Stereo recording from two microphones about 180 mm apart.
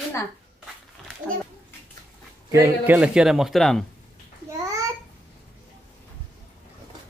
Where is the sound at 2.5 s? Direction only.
15° right (ahead or behind).